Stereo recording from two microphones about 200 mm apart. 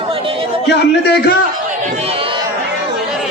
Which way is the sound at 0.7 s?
55° left (ahead or behind).